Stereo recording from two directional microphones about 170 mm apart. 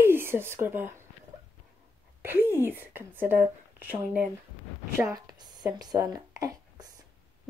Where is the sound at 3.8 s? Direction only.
10° right (ahead or behind).